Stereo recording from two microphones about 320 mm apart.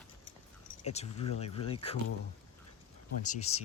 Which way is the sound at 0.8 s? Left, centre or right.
Centre.